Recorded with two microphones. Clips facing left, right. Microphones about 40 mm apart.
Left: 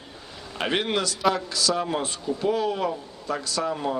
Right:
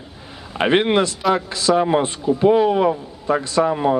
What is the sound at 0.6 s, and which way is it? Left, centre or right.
Speech, right.